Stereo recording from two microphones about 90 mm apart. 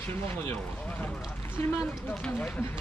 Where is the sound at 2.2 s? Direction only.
15° left (ahead or behind).